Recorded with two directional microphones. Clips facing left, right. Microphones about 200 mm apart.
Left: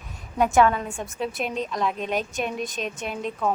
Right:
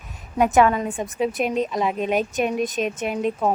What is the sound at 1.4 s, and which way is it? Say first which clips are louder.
Speech: right 6 dB; 45° right (ahead or behind).